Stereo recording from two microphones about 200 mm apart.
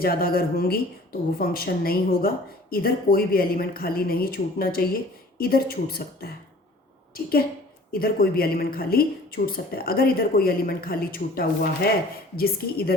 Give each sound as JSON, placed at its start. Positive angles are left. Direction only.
{"t": 0.0, "sound": "speech", "side_deg": 50}
{"t": 7.9, "sound": "speech", "side_deg": 50}